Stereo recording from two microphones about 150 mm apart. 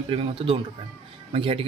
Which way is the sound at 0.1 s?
35° right (ahead or behind).